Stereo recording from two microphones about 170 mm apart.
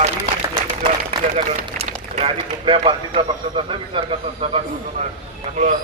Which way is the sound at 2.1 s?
35° right (ahead or behind).